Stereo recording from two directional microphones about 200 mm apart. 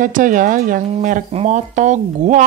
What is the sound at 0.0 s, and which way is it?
Speech, 40° right (ahead or behind).